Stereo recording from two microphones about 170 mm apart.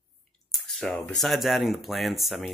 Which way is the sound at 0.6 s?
5° left (ahead or behind).